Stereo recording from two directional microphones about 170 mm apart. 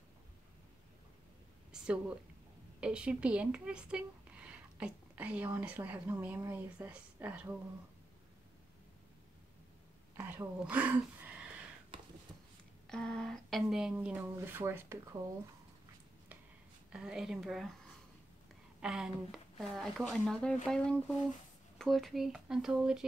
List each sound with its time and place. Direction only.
1.7 s a sound: 5° right (ahead or behind)
2.8 s speech: 5° right (ahead or behind)
10.1 s speech: 10° right (ahead or behind)
11.9 s a sound: 30° right (ahead or behind)
12.8 s a woman's voice: 5° left (ahead or behind); by 15.3 s 15° right (ahead or behind)
16.9 s a woman's voice: 5° right (ahead or behind)
18.8 s a woman's voice: 5° right (ahead or behind)